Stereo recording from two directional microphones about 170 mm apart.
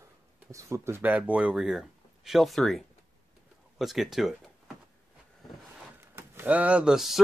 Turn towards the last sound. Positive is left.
turn(degrees=0)  # may be behind; listen again after turning